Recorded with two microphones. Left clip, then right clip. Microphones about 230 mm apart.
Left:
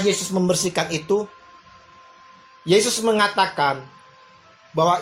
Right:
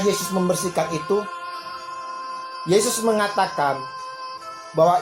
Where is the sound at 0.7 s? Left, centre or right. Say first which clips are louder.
Even; left.